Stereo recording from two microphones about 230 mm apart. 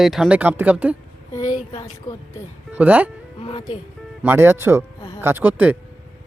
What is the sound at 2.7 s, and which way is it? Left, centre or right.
Speech, centre.